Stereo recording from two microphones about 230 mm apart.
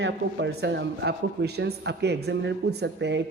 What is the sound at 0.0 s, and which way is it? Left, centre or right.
Speech, right.